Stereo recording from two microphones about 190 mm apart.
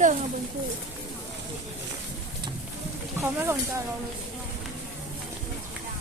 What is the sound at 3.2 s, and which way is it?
Speech, 10° right (ahead or behind).